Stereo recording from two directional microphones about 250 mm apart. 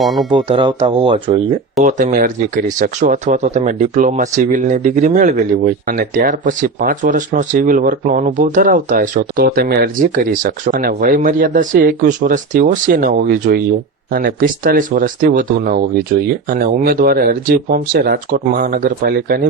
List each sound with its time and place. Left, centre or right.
0.0 s speech: centre
0.3 s speech: centre; by 19.4 s right